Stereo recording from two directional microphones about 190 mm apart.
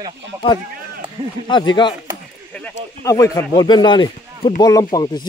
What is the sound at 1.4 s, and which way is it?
Speech, 25° left (ahead or behind).